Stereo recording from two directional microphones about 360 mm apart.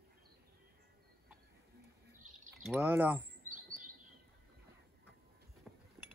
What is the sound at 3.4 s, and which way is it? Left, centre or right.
Chirp, right.